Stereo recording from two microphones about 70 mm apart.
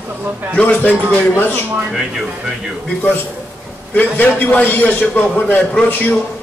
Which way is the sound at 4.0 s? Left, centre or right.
Left.